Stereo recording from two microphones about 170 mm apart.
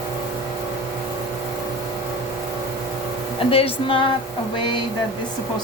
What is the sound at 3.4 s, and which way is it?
Music, 35° left (ahead or behind).